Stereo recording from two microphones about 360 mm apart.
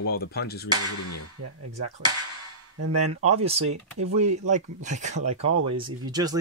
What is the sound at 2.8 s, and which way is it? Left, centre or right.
Speech, right.